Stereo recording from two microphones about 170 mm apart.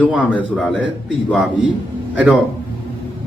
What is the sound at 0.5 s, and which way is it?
Speech, centre (ahead or behind).